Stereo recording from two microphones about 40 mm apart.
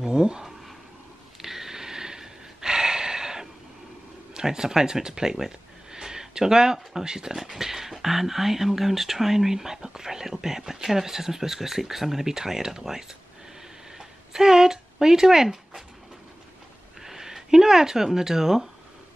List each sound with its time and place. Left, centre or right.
0.0 s speech: centre
1.4 s a sound: centre
4.3 s speech: centre
17.0 s speech: centre